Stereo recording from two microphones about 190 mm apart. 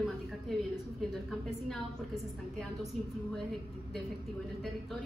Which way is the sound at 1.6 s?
Centre (ahead or behind).